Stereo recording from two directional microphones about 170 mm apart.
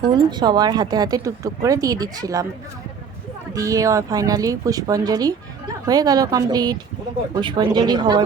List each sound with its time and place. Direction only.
0.1 s speech: 25° right (ahead or behind)
3.5 s speech: 20° right (ahead or behind)